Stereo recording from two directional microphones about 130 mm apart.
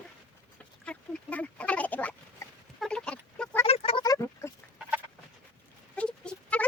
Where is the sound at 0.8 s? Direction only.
10° left (ahead or behind).